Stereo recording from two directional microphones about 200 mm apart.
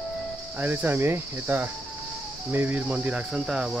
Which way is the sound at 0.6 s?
10° right (ahead or behind).